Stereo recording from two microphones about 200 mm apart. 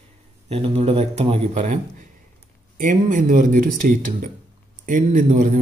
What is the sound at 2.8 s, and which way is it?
Speech, 40° right (ahead or behind).